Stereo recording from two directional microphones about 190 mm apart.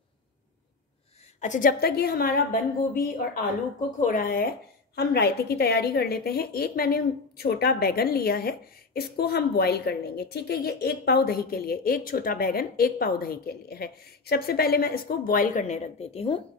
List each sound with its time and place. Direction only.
1.4 s a woman's voice: 45° left (ahead or behind)